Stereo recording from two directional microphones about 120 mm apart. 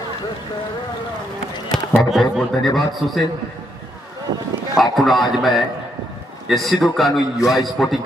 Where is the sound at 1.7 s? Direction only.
Centre (ahead or behind).